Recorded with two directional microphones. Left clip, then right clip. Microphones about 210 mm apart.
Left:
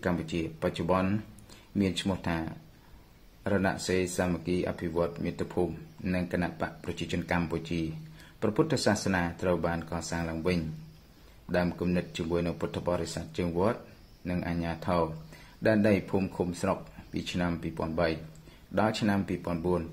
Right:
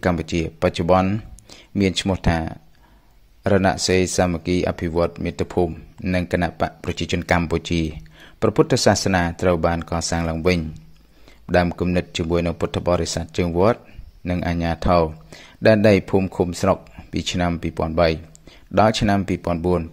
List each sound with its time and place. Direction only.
0.0 s speech: 40° right (ahead or behind)